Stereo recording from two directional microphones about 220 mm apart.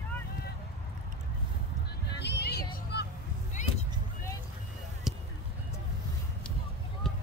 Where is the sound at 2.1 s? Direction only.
50° left (ahead or behind).